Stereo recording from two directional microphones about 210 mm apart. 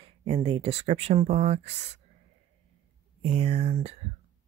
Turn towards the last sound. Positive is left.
turn(degrees=-30)  # may be behind; listen again after turning